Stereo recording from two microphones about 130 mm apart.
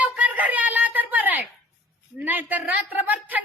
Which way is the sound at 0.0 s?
10° right (ahead or behind).